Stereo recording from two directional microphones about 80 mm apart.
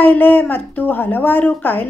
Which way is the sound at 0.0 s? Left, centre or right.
Left.